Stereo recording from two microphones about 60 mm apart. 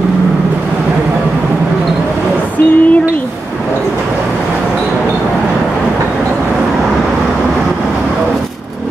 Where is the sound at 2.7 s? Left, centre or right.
Left.